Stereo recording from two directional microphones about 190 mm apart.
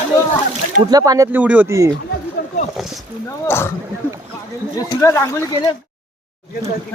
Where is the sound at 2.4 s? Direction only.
55° left (ahead or behind).